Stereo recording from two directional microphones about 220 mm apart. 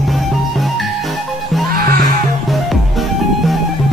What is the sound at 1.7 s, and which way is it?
Music, 40° right (ahead or behind).